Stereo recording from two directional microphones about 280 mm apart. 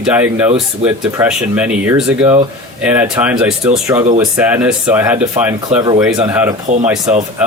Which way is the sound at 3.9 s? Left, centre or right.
Right.